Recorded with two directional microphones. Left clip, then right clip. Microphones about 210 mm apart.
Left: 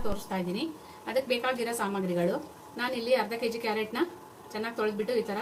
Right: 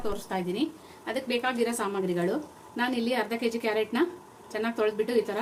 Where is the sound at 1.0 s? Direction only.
25° right (ahead or behind).